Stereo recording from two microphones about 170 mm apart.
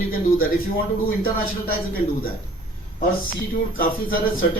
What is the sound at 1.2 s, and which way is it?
Speech, 60° left (ahead or behind).